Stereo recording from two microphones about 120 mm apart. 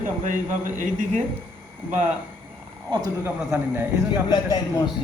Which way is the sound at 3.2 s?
20° right (ahead or behind).